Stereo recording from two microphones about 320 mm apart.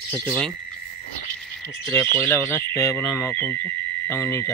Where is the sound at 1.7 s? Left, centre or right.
Centre.